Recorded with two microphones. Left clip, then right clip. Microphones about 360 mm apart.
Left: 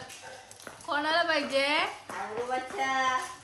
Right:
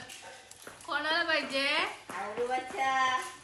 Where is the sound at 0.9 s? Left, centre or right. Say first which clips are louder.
Left 3 dB; left.